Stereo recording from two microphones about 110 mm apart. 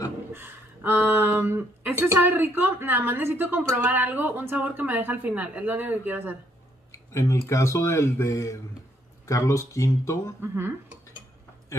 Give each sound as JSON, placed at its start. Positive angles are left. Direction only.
{"t": 0.3, "sound": "speech", "side_deg": -20}
{"t": 6.9, "sound": "speech", "side_deg": 25}
{"t": 10.4, "sound": "speech", "side_deg": -20}